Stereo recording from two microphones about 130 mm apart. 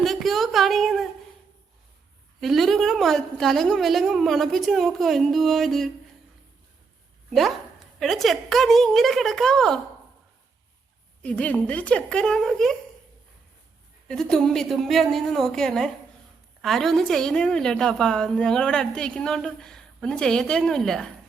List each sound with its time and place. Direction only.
0.0 s a sound: centre (ahead or behind)
2.4 s a woman's voice: centre (ahead or behind)
7.3 s a woman's voice: centre (ahead or behind)
11.2 s a woman's voice: 10° left (ahead or behind)
14.1 s a woman's voice: 5° left (ahead or behind)